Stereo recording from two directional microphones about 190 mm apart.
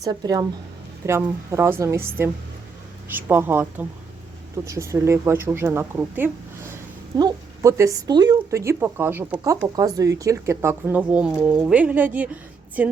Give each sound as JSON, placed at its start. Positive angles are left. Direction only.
{"t": 0.0, "sound": "speech", "side_deg": -20}